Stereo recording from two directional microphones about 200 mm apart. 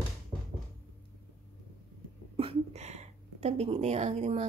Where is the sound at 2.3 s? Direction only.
25° right (ahead or behind).